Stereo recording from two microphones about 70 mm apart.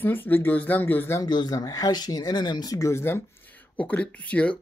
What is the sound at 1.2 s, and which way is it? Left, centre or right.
Speech, left.